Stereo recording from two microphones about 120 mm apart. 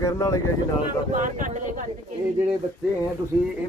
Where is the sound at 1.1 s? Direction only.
90° right.